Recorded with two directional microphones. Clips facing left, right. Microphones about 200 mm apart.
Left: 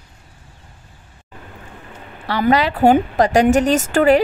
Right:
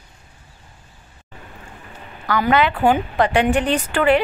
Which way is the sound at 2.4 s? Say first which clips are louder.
Left 3 dB; 40° left (ahead or behind).